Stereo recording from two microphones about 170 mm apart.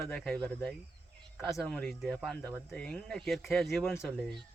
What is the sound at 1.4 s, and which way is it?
Speech, centre (ahead or behind).